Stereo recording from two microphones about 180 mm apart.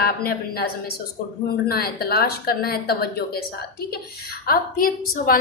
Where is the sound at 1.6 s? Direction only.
60° left (ahead or behind).